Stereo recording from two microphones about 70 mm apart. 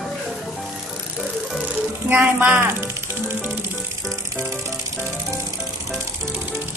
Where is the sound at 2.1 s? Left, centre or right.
Right.